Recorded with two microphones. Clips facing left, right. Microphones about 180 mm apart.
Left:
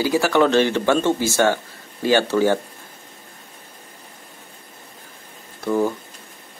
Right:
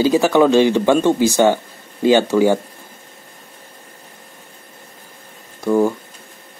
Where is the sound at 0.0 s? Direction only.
20° right (ahead or behind).